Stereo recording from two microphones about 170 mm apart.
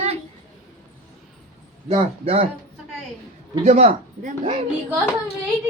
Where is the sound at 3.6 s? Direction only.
45° right (ahead or behind).